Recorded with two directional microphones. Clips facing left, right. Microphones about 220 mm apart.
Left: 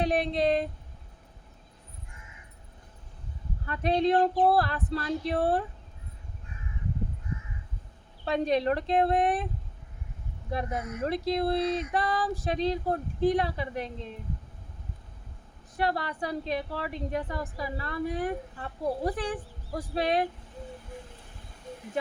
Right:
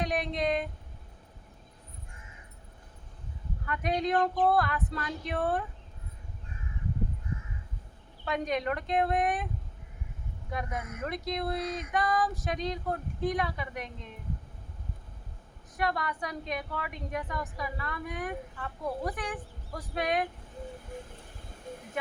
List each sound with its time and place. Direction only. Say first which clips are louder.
0.0 s speech: left 5 dB; 30° left (ahead or behind)
3.7 s a woman's voice: left 5 dB; 30° left (ahead or behind)
8.2 s a woman's voice: left 5 dB; 30° left (ahead or behind)
10.5 s a woman's voice: left 4 dB; 30° left (ahead or behind)
15.8 s a woman's voice: left 2 dB; 30° left (ahead or behind)